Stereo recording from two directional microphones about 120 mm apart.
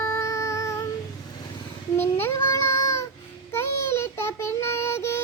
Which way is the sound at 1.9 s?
20° left (ahead or behind).